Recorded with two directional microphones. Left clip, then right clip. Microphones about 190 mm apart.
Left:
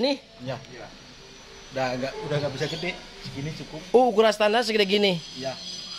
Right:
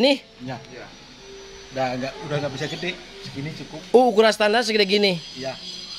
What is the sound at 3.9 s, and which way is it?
Speech, 20° right (ahead or behind).